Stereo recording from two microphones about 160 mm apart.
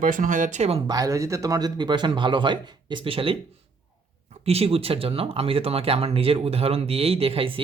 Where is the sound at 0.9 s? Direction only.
20° right (ahead or behind).